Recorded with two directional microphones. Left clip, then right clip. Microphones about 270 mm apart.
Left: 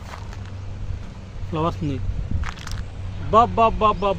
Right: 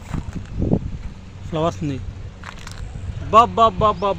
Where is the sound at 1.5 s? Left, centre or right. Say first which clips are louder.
Right 3 dB; right.